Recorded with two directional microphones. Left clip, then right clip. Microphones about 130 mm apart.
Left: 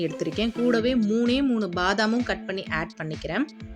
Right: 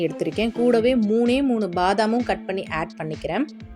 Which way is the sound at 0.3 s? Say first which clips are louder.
Right 5 dB; 20° right (ahead or behind).